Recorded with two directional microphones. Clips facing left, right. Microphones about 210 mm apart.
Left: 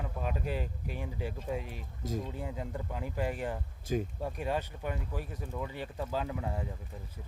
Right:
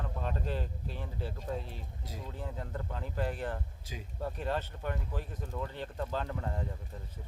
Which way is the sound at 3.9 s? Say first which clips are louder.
Left 17 dB; 50° left (ahead or behind).